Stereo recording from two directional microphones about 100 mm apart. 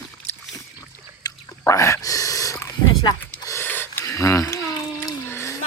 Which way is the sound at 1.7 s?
30° left (ahead or behind).